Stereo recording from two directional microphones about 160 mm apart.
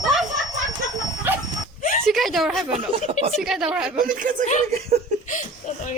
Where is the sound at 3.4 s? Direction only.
5° right (ahead or behind).